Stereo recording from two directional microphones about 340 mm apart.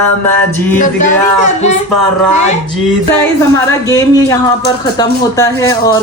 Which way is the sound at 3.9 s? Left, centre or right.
Centre.